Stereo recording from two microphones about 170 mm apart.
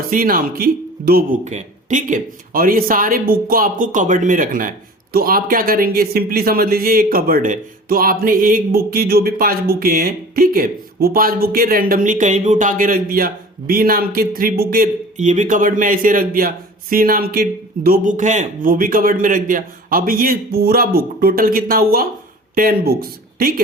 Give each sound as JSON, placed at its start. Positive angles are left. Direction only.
{"t": 0.0, "sound": "speech", "side_deg": -60}
{"t": 1.5, "sound": "speech", "side_deg": -45}